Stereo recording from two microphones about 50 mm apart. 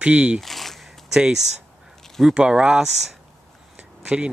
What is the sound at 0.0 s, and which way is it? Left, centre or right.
Speech, right.